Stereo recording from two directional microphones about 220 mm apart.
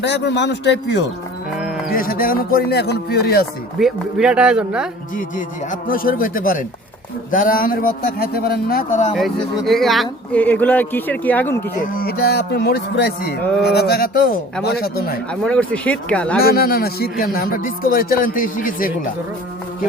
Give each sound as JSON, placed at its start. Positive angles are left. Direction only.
{"t": 0.0, "sound": "speech", "side_deg": 50}
{"t": 1.5, "sound": "livestock", "side_deg": 0}
{"t": 1.9, "sound": "speech", "side_deg": 40}
{"t": 3.8, "sound": "speech", "side_deg": 0}
{"t": 5.1, "sound": "speech", "side_deg": 35}
{"t": 9.1, "sound": "speech", "side_deg": 0}
{"t": 11.8, "sound": "speech", "side_deg": 40}
{"t": 15.3, "sound": "speech", "side_deg": 5}
{"t": 16.4, "sound": "speech", "side_deg": 45}